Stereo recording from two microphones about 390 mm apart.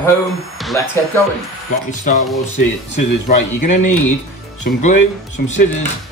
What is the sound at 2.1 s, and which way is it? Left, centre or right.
Speech, centre.